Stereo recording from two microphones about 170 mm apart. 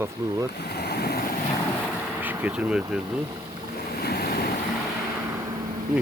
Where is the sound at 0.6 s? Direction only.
70° left (ahead or behind).